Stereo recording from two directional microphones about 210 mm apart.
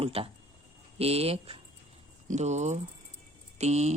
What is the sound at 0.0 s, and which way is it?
A woman's voice, 25° right (ahead or behind).